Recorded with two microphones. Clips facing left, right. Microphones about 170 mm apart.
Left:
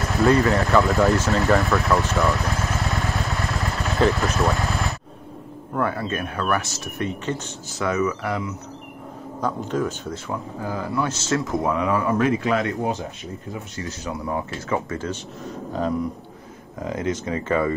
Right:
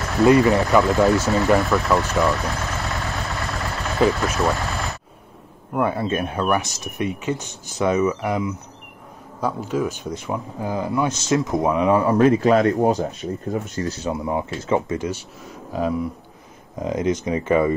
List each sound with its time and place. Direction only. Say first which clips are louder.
0.2 s speech: right 4 dB; 15° right (ahead or behind)
0.8 s speech: right 2 dB; centre (ahead or behind)
2.0 s vehicle: right 1 dB; centre (ahead or behind)
5.8 s speech: right 3 dB; 20° right (ahead or behind)
9.7 s speech: right 1 dB; 10° right (ahead or behind); by 13.9 s 40° right (ahead or behind)
14.0 s speech: right 1 dB; 20° right (ahead or behind)
16.8 s speech: right 4 dB; 20° right (ahead or behind)